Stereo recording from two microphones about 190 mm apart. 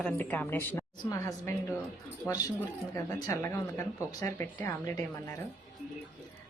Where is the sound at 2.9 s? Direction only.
15° left (ahead or behind).